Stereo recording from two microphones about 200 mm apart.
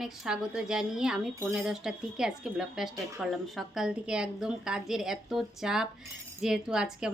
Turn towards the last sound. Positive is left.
turn(degrees=-5)  # may be behind; listen again after turning